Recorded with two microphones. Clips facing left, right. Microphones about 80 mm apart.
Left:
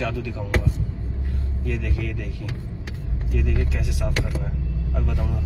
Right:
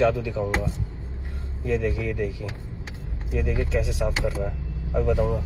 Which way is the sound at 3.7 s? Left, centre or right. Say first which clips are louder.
Right 5 dB; left.